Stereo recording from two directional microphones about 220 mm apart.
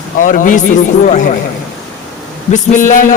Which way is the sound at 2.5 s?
35° left (ahead or behind).